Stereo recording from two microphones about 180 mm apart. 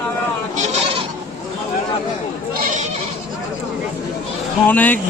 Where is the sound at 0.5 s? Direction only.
40° right (ahead or behind).